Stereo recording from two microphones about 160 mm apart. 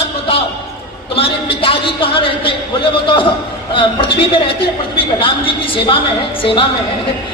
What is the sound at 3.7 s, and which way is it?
A man's voice, 35° left (ahead or behind).